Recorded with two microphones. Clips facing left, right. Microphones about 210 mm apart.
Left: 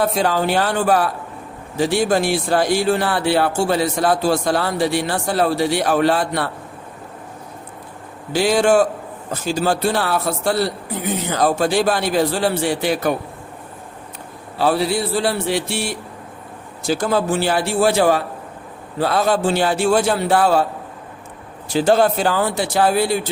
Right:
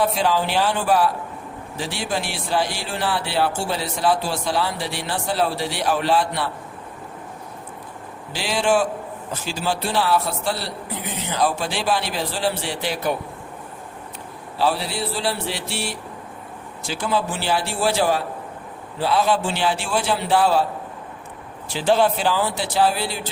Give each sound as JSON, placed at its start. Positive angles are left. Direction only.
{"t": 0.1, "sound": "speech", "side_deg": 45}
{"t": 8.3, "sound": "speech", "side_deg": 45}
{"t": 14.6, "sound": "speech", "side_deg": 50}
{"t": 21.7, "sound": "speech", "side_deg": 45}